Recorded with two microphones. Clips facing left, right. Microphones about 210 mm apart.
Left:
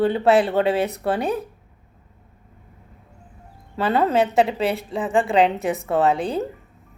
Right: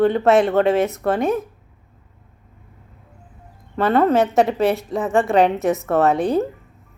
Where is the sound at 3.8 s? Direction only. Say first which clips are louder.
Right 3 dB; 30° left (ahead or behind).